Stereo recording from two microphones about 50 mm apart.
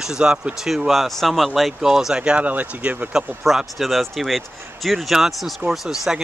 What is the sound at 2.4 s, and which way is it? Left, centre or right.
Speech, right.